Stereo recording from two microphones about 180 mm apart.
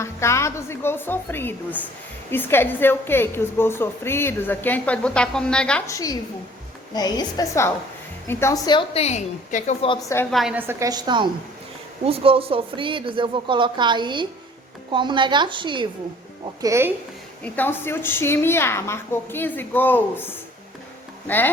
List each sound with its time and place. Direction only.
0.0 s a woman's voice: 15° left (ahead or behind)
5.9 s a woman's voice: 20° left (ahead or behind)
8.6 s a woman's voice: 25° left (ahead or behind); by 9.7 s 45° left (ahead or behind)
10.3 s a woman's voice: 5° right (ahead or behind); by 15.9 s 25° right (ahead or behind)
16.6 s a woman's voice: 15° right (ahead or behind)
17.4 s a woman's voice: 10° left (ahead or behind)